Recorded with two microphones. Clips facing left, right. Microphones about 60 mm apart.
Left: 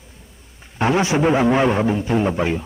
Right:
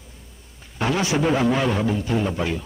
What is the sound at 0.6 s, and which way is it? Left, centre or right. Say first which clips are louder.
A man's voice: left 5 dB; left.